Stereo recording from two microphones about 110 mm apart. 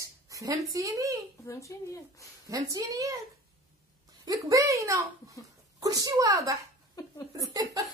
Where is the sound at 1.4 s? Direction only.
30° left (ahead or behind).